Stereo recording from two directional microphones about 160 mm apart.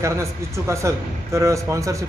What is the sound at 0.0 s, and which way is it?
A man's voice, 20° right (ahead or behind).